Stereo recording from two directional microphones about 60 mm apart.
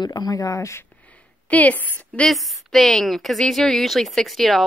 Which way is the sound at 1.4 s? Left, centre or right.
Left.